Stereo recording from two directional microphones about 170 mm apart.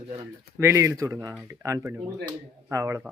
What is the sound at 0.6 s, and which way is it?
Speech, 15° right (ahead or behind).